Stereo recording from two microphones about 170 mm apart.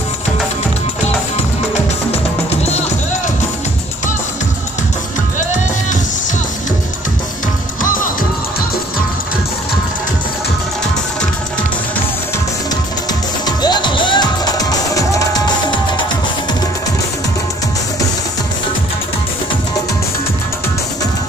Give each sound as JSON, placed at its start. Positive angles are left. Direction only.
{"t": 7.8, "sound": "music", "side_deg": 55}
{"t": 13.5, "sound": "music", "side_deg": 25}